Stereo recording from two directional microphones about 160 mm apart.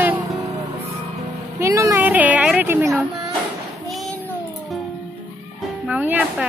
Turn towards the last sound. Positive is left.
turn(degrees=-10)  # may be behind; listen again after turning